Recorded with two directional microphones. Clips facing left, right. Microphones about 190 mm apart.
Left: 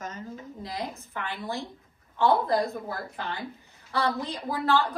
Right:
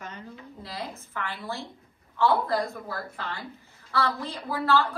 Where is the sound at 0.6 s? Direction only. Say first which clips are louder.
Left 2 dB; 20° left (ahead or behind).